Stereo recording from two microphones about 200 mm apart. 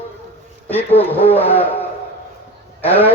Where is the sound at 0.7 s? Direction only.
10° left (ahead or behind).